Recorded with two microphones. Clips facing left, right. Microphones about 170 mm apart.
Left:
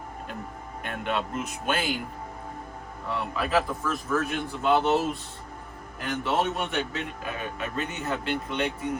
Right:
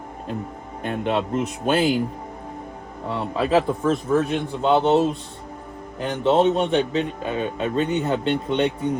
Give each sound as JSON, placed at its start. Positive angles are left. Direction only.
{"t": 0.8, "sound": "speech", "side_deg": -30}
{"t": 3.1, "sound": "a man's voice", "side_deg": -30}
{"t": 6.0, "sound": "a man's voice", "side_deg": -20}